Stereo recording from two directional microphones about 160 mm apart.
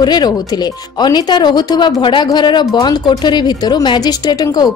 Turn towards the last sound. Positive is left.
turn(degrees=25)  # may be behind; listen again after turning